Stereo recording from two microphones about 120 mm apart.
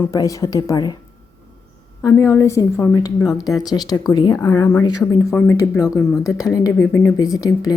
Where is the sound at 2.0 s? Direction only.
25° left (ahead or behind).